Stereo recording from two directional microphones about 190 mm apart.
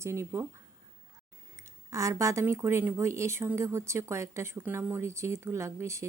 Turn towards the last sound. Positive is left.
turn(degrees=-15)  # may be behind; listen again after turning